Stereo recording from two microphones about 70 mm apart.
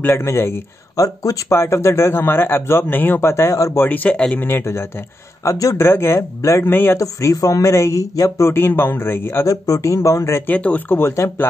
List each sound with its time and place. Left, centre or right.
0.1 s speech: left
0.9 s speech: left
1.5 s speech: left
3.7 s speech: left
4.4 s speech: left
5.4 s speech: left
5.9 s speech: left
6.7 s speech: left
7.0 s speech: left
9.5 s speech: left
10.4 s speech: left
11.0 s speech: left